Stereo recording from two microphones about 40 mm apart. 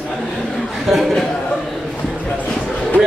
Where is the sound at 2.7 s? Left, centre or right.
Left.